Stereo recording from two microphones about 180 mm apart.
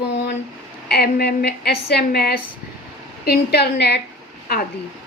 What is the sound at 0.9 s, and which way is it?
A woman's voice, 60° left (ahead or behind).